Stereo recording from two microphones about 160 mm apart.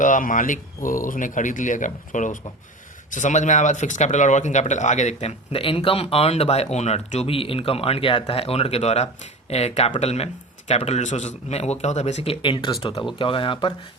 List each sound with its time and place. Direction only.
0.0 s speech: 55° left (ahead or behind); by 13.7 s 30° left (ahead or behind)